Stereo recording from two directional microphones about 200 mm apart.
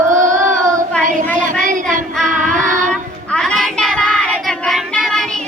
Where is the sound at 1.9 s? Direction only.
Centre (ahead or behind).